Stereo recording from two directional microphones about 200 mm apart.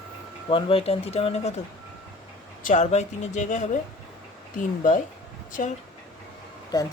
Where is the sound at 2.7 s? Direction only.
35° left (ahead or behind).